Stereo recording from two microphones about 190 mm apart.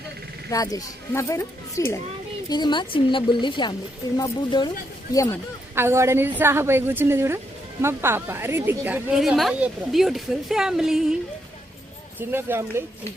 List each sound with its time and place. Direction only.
0.5 s speech: 20° left (ahead or behind)
5.7 s a woman's voice: 15° right (ahead or behind)
12.2 s a woman's voice: 10° right (ahead or behind)